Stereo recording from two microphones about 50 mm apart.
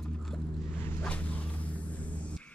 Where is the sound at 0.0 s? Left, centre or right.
Centre.